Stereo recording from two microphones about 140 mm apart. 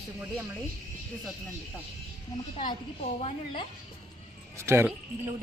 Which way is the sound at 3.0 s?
45° left (ahead or behind).